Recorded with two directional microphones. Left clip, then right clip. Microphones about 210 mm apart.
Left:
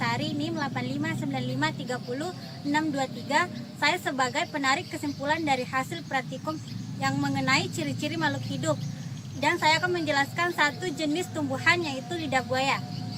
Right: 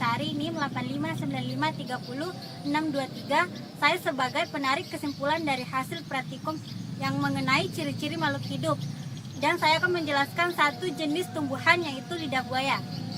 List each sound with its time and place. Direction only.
0.0 s a woman's voice: 20° left (ahead or behind)